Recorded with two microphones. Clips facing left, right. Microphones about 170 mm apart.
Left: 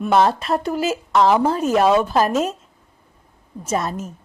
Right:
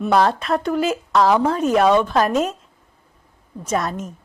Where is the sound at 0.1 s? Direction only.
Centre (ahead or behind).